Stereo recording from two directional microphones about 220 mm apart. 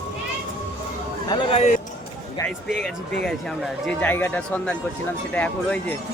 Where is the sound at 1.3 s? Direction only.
25° left (ahead or behind).